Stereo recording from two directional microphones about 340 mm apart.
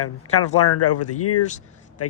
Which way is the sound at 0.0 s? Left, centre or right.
Left.